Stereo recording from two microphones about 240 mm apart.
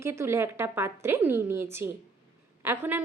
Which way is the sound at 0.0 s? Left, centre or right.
Centre.